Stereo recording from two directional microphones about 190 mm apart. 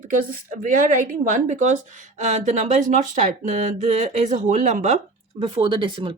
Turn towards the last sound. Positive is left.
turn(degrees=-25)  # may be behind; listen again after turning